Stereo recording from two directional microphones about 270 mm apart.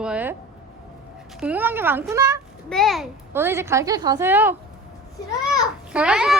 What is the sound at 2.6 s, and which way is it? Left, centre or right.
A child's voice, centre.